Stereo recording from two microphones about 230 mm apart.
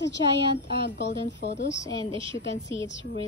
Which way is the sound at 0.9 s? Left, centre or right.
Left.